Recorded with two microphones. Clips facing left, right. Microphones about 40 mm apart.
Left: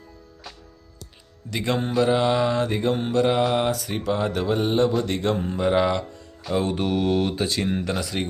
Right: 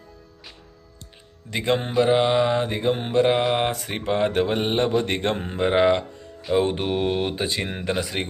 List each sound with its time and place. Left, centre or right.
1.5 s mantra: right
5.0 s speech: right
6.4 s mantra: right